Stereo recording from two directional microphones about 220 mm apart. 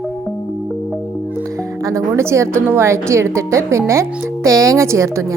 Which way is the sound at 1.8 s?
15° right (ahead or behind).